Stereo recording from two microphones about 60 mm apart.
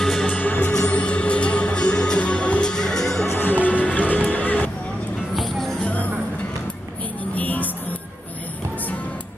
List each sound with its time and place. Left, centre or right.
0.0 s music: centre
0.3 s music: left; by 3.3 s centre
3.3 s music: left
5.3 s music: centre
5.8 s music: left
7.3 s music: left